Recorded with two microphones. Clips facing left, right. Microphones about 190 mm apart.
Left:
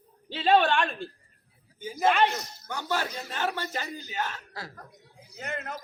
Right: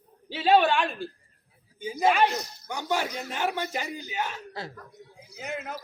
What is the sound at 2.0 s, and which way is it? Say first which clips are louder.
Speech: right 1 dB; 5° right (ahead or behind).